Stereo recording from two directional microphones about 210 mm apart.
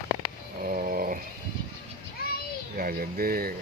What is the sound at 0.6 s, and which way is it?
Dog, 40° right (ahead or behind).